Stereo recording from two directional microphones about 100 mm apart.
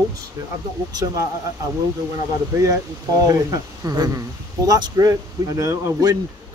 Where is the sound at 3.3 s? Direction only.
40° right (ahead or behind).